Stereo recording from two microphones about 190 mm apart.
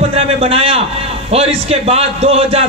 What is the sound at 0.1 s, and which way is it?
A man's voice, 30° right (ahead or behind).